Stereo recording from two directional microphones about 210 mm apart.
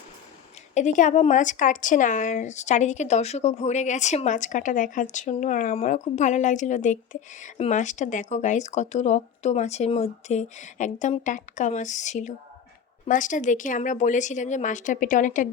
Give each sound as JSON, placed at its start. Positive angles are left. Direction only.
{"t": 0.7, "sound": "speech", "side_deg": 35}